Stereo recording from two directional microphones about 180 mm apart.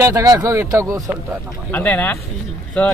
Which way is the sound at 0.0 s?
20° right (ahead or behind).